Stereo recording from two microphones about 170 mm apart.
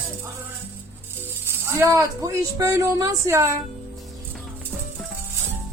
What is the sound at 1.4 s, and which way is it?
Speech, 15° right (ahead or behind).